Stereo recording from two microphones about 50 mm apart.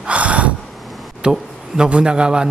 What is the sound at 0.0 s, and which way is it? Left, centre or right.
Gasp, right.